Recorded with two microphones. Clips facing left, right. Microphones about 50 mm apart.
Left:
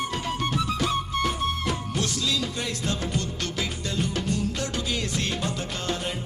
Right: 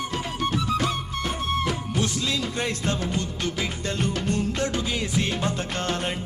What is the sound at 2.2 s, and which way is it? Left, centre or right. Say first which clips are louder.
Speech: right 1 dB; right.